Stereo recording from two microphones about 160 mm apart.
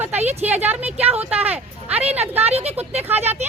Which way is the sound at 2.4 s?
40° right (ahead or behind).